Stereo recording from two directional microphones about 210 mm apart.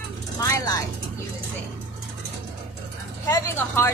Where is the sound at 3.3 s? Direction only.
15° left (ahead or behind).